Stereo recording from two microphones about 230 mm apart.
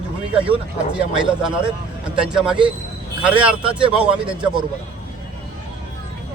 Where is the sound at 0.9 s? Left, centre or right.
Centre.